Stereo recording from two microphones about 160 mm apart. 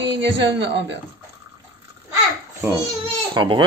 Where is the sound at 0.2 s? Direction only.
90° right.